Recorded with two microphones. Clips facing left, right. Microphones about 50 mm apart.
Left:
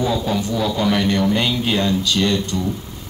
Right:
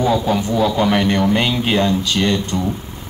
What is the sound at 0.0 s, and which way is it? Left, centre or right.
Speech, right.